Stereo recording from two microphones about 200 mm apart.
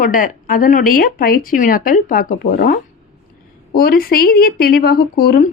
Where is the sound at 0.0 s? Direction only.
40° left (ahead or behind).